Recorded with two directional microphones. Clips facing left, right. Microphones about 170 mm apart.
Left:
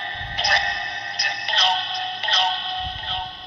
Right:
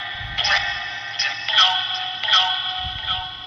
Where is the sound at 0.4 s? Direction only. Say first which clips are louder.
Left 3 dB; 50° left (ahead or behind).